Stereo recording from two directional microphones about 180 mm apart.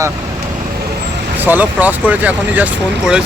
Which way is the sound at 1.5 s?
10° right (ahead or behind).